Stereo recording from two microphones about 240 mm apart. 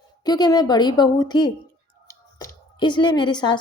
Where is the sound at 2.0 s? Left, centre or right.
Centre.